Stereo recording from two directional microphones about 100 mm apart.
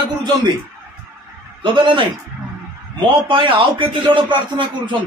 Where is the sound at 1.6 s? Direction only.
55° right (ahead or behind).